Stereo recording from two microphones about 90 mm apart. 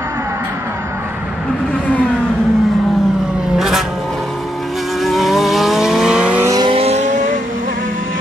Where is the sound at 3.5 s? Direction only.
5° right (ahead or behind).